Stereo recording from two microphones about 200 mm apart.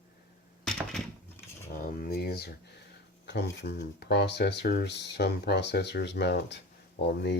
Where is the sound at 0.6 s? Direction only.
Centre (ahead or behind).